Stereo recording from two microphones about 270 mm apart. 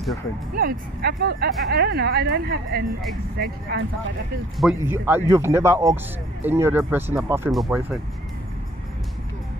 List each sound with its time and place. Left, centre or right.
0.6 s speech: right
4.6 s speech: centre